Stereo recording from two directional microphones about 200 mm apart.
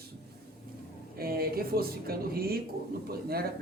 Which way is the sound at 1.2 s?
50° right (ahead or behind).